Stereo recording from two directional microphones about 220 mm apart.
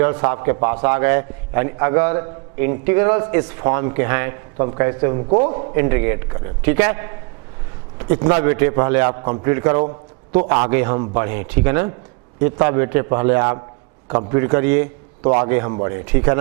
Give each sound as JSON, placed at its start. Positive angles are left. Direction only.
{"t": 0.0, "sound": "a man's voice", "side_deg": -15}
{"t": 5.7, "sound": "a man's voice", "side_deg": -15}
{"t": 7.9, "sound": "a sound", "side_deg": -15}
{"t": 8.4, "sound": "a man's voice", "side_deg": -15}
{"t": 15.2, "sound": "a man's voice", "side_deg": -25}
{"t": 15.4, "sound": "a man's voice", "side_deg": -15}